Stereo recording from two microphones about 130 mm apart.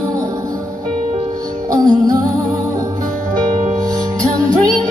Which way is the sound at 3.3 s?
30° right (ahead or behind).